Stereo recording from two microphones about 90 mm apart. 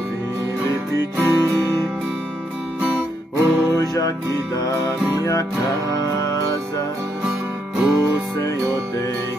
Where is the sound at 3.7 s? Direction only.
40° left (ahead or behind).